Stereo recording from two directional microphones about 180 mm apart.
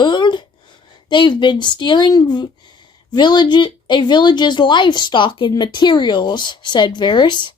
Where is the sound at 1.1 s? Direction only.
25° left (ahead or behind).